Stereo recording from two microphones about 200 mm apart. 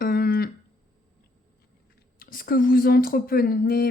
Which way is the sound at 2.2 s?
45° left (ahead or behind).